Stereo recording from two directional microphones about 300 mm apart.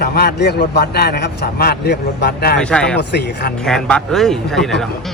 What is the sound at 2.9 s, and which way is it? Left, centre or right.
Speech, left.